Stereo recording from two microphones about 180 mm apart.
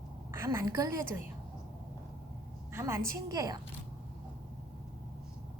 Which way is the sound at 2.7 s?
15° right (ahead or behind).